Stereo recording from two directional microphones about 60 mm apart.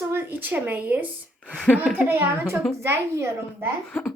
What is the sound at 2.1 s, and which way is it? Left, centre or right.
A woman's voice, right.